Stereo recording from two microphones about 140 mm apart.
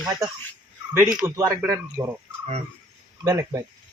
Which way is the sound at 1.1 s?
15° right (ahead or behind).